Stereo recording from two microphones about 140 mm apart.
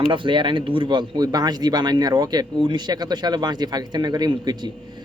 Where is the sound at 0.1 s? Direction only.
35° right (ahead or behind).